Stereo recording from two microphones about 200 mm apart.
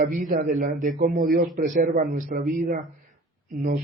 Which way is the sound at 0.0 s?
40° right (ahead or behind).